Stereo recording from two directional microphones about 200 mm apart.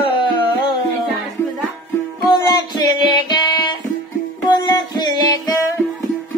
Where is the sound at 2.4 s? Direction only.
20° left (ahead or behind).